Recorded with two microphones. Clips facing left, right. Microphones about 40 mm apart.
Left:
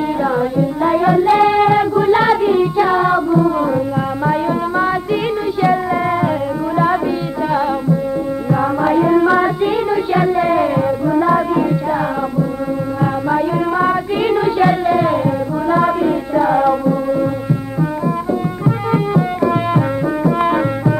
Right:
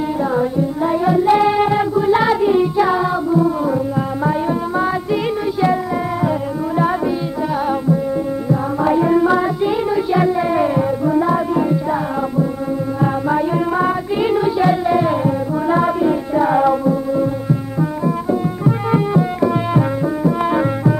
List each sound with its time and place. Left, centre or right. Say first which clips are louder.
0.2 s music: left 1 dB; left
1.2 s music: left 1 dB; centre
3.1 s carnatic music: left 2 dB; left
4.3 s music: left 4 dB; centre
7.5 s tabla: left 1 dB; centre
8.8 s music: left 1 dB; centre
19.4 s music: left 1 dB; centre